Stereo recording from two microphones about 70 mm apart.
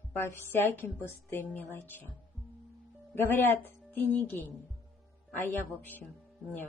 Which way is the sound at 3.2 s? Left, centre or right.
Left.